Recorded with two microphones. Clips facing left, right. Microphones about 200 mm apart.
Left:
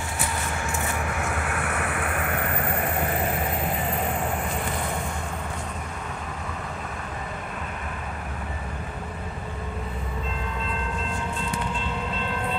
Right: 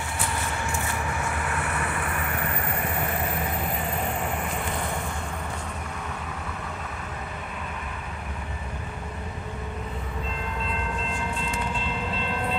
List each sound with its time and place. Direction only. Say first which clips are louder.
1.5 s vehicle: left 1 dB; 60° left (ahead or behind)